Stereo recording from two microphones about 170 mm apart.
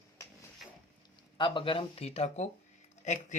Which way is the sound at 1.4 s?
30° left (ahead or behind).